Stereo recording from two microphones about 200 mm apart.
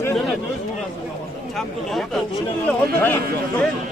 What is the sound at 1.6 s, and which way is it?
A man's voice, centre (ahead or behind).